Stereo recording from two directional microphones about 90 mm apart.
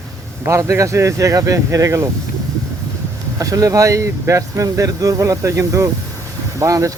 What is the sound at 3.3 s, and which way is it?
Speech, 40° right (ahead or behind).